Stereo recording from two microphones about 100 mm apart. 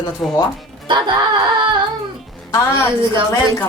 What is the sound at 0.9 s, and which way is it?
Music, 50° right (ahead or behind).